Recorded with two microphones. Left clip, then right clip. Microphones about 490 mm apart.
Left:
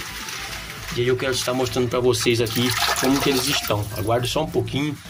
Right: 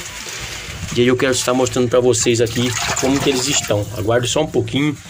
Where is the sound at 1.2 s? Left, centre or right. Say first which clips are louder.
Right 6 dB; left.